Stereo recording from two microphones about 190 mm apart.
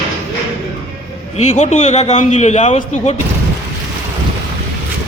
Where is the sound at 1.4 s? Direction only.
40° left (ahead or behind).